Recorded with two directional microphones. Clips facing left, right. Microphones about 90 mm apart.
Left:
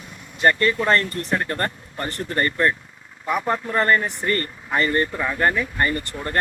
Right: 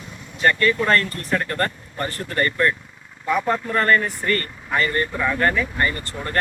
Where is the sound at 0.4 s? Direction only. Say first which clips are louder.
Even; 25° left (ahead or behind).